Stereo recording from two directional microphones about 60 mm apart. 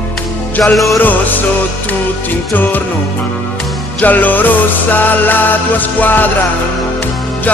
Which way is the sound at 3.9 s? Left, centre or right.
Left.